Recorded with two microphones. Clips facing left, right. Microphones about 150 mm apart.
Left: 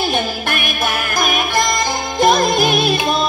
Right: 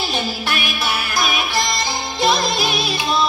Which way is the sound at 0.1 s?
50° left (ahead or behind).